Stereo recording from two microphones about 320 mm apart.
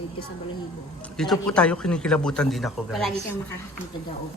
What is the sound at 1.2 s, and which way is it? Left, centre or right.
A man's voice, centre.